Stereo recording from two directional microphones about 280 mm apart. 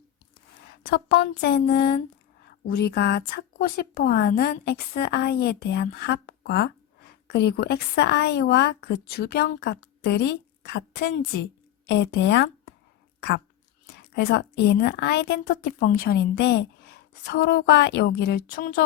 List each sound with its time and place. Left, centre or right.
0.8 s speech: left
13.1 s a sound: left
13.8 s speech: left